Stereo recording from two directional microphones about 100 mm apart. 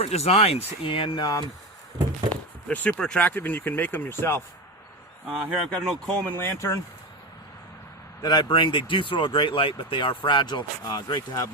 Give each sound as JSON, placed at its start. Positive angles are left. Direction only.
{"t": 0.0, "sound": "speech", "side_deg": 90}
{"t": 0.9, "sound": "speech", "side_deg": 60}
{"t": 1.2, "sound": "speech", "side_deg": 40}
{"t": 2.3, "sound": "speech", "side_deg": 15}
{"t": 5.6, "sound": "speech", "side_deg": 5}
{"t": 8.2, "sound": "speech", "side_deg": 45}